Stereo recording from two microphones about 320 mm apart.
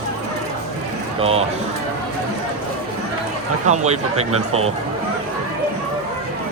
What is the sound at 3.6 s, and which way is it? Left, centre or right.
Speech, right.